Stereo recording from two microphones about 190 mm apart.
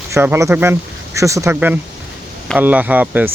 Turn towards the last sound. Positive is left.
turn(degrees=-10)  # may be behind; listen again after turning